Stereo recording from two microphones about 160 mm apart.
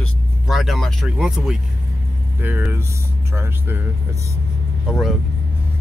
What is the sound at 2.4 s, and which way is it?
Speech, 10° right (ahead or behind).